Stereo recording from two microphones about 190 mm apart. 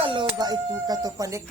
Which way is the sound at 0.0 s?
25° right (ahead or behind).